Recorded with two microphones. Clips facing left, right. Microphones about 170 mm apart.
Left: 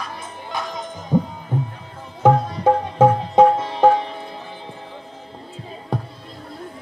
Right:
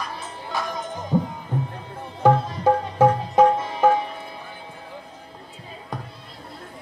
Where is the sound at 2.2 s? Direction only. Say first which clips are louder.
Left 2 dB; 20° left (ahead or behind).